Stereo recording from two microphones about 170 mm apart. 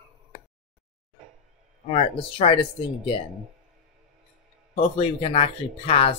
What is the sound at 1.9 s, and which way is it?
Speech, 35° left (ahead or behind).